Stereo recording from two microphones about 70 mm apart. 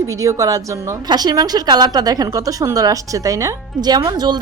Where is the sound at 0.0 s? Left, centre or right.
Right.